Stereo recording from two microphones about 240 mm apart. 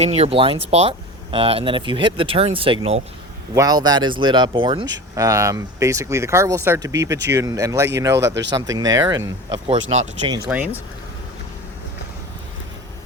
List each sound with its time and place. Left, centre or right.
0.0 s speech: right
8.3 s speech: right
8.5 s speech: centre
9.8 s speech: right
10.5 s speech: centre